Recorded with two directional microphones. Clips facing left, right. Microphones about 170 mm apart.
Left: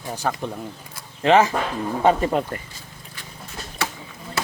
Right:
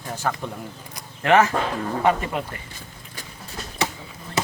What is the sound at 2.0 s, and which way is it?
Speech, 30° left (ahead or behind).